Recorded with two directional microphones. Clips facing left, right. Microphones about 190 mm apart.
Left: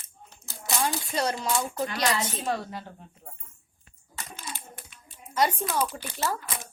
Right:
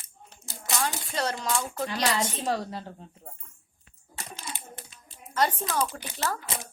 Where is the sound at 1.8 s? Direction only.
30° right (ahead or behind).